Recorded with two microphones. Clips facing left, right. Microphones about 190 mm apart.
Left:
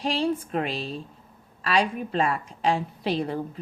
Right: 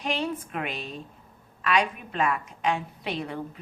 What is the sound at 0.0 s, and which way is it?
A woman's voice, 35° left (ahead or behind).